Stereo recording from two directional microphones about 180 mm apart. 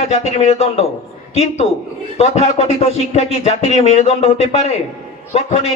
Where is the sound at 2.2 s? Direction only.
35° left (ahead or behind).